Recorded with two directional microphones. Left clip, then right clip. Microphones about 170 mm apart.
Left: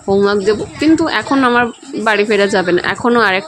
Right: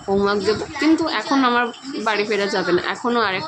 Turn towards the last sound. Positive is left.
turn(degrees=45)  # may be behind; listen again after turning